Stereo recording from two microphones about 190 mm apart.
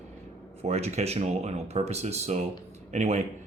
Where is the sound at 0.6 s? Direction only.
35° right (ahead or behind).